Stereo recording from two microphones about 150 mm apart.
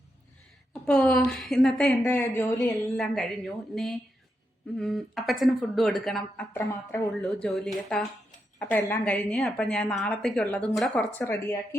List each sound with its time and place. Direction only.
0.7 s a woman's voice: 5° left (ahead or behind)
2.0 s speech: 15° left (ahead or behind)
3.0 s a woman's voice: centre (ahead or behind)
6.5 s speech: 20° left (ahead or behind)
7.1 s a woman's voice: 5° left (ahead or behind)
11.2 s speech: 20° left (ahead or behind)